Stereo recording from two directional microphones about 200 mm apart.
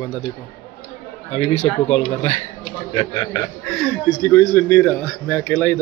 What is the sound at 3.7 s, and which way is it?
Speech, 10° left (ahead or behind).